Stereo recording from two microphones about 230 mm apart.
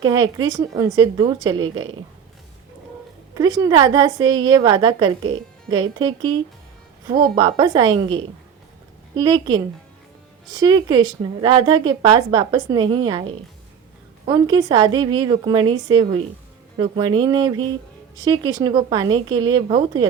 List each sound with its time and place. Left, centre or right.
0.0 s a woman's voice: centre
1.6 s a woman's voice: right
3.3 s a woman's voice: centre